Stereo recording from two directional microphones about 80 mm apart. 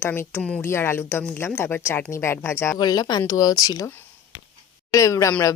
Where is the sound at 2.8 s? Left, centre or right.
Left.